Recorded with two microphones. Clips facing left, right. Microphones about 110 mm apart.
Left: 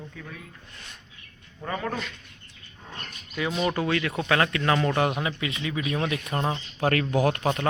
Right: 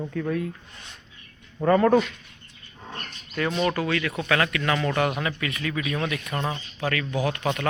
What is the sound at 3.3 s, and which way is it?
Speech, 5° left (ahead or behind).